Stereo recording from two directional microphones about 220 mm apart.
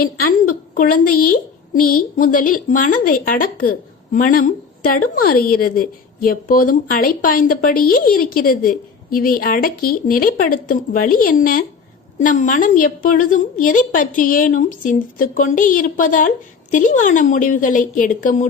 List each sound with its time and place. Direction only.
0.0 s a woman's voice: 45° left (ahead or behind)